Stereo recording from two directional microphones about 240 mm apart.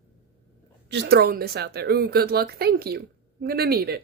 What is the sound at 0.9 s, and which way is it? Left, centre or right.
A woman's voice, right.